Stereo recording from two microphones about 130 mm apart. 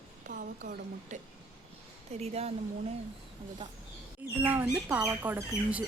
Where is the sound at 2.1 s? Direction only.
50° right (ahead or behind).